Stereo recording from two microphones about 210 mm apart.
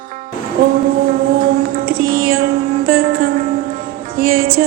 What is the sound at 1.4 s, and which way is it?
Music, 45° right (ahead or behind).